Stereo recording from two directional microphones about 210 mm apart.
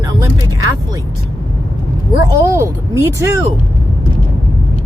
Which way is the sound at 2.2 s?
15° right (ahead or behind).